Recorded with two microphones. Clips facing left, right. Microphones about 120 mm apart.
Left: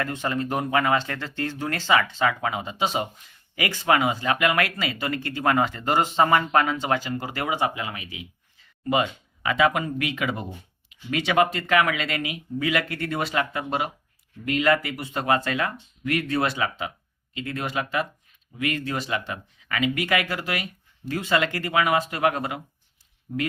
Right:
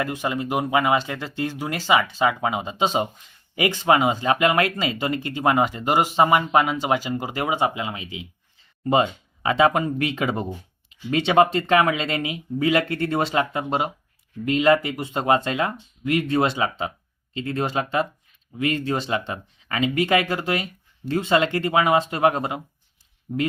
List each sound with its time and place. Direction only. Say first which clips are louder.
0.0 s speech: right 2 dB; 15° right (ahead or behind)